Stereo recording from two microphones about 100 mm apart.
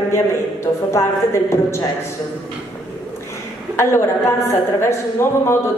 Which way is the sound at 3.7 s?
25° left (ahead or behind).